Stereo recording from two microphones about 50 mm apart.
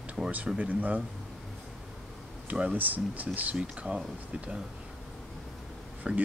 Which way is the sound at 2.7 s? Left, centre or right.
Right.